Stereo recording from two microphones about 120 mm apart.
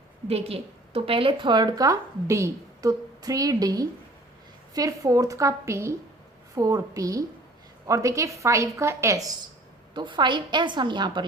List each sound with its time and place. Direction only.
0.3 s a woman's voice: 55° right (ahead or behind); by 9.3 s 25° right (ahead or behind)
9.9 s a woman's voice: 40° right (ahead or behind)